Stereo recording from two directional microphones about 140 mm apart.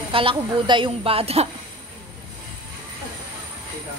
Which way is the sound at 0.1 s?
40° right (ahead or behind).